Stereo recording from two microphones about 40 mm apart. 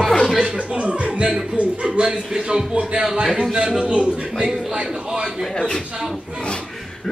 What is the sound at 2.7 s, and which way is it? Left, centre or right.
A man's voice, right.